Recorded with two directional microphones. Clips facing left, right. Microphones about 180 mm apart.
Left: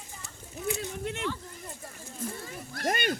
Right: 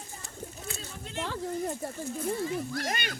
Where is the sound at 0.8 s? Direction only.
65° left (ahead or behind).